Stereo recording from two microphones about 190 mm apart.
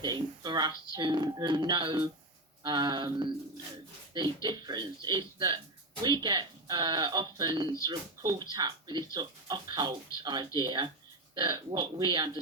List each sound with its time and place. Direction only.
0.0 s speech: 20° right (ahead or behind)
4.4 s speech: 20° right (ahead or behind)